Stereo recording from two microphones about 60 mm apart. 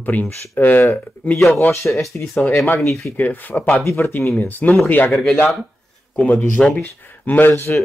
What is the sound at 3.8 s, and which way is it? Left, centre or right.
Speech, left.